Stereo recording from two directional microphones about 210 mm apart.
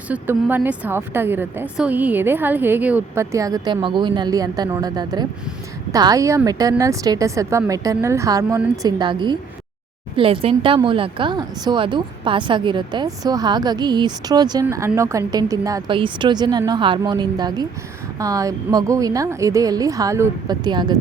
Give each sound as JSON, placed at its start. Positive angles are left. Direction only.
{"t": 0.1, "sound": "a woman's voice", "side_deg": -10}